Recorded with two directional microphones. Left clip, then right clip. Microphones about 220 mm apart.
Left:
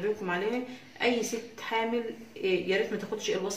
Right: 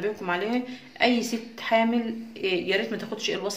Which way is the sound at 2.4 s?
45° right (ahead or behind).